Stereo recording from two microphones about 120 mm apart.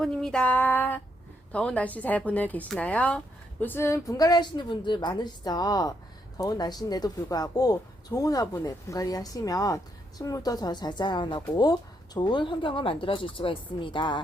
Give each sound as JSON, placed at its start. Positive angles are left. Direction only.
{"t": 0.0, "sound": "speech", "side_deg": 5}